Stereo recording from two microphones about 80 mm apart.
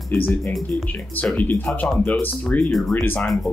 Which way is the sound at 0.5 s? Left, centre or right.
Centre.